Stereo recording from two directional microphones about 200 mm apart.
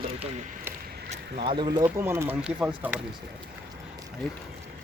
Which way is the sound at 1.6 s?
20° right (ahead or behind).